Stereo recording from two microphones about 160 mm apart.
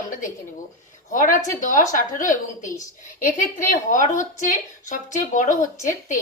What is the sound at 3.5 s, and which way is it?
A woman's voice, 55° left (ahead or behind).